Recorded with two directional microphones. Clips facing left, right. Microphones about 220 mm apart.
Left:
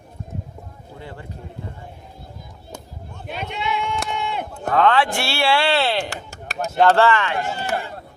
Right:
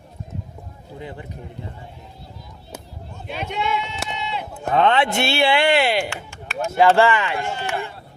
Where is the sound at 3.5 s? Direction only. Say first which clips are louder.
Right 2 dB; 50° right (ahead or behind).